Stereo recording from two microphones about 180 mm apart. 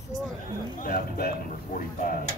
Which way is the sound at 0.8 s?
50° left (ahead or behind).